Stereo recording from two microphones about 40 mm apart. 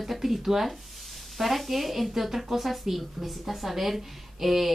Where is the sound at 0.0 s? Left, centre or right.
Centre.